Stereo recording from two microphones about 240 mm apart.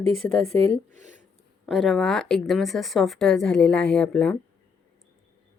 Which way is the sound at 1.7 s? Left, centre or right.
Centre.